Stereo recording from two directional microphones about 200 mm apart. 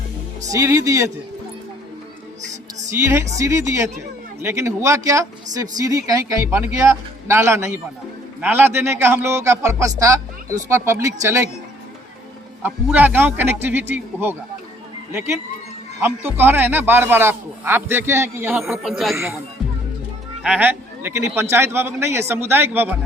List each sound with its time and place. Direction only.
0.4 s a man's voice: 15° right (ahead or behind)
2.5 s music: 35° right (ahead or behind)
2.9 s a man's voice: 15° right (ahead or behind)
12.6 s a man's voice: 10° right (ahead or behind)
16.0 s a man's voice: 10° right (ahead or behind)
18.9 s speech: centre (ahead or behind)
19.1 s a man's voice: 15° right (ahead or behind)
20.4 s a man's voice: 5° right (ahead or behind)